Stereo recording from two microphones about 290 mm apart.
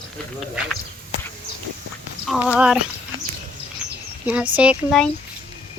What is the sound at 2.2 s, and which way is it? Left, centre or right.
Speech, centre.